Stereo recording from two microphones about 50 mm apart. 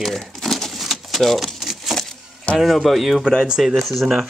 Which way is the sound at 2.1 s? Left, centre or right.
Centre.